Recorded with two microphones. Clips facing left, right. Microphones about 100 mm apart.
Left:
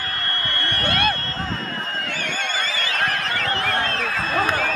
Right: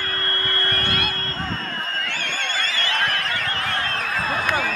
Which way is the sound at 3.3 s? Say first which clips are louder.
Left 2 dB; 35° left (ahead or behind).